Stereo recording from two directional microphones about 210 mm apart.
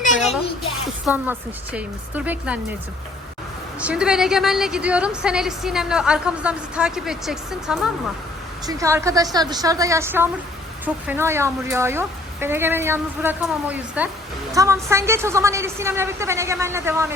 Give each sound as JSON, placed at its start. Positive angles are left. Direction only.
{"t": 1.0, "sound": "speech", "side_deg": -5}
{"t": 3.8, "sound": "a woman's voice", "side_deg": -5}
{"t": 8.6, "sound": "speech", "side_deg": -15}